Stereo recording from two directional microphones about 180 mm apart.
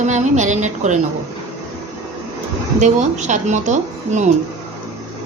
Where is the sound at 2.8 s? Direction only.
40° right (ahead or behind).